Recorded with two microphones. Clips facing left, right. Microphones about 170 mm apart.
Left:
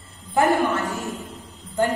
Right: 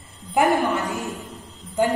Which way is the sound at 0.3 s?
15° right (ahead or behind).